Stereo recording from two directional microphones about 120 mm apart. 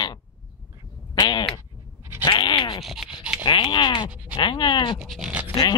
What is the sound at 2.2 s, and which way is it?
Bleat, 40° left (ahead or behind).